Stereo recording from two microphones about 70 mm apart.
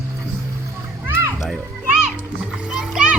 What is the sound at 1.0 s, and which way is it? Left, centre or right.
Children playing, right.